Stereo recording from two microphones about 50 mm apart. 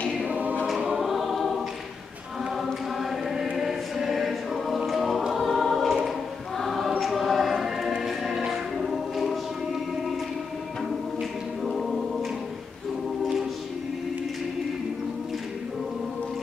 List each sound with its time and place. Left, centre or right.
0.3 s choir: right
0.7 s choir: centre
2.5 s chant: centre
3.5 s music: centre
4.8 s choir: centre
7.0 s music: centre
11.6 s choir: centre